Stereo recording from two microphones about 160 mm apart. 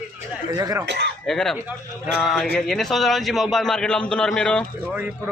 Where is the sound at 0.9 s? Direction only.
90° right.